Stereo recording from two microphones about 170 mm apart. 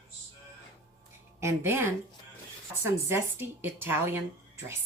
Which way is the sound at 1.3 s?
15° right (ahead or behind).